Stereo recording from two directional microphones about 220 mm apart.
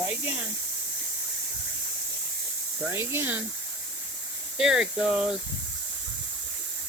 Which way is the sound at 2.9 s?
10° right (ahead or behind).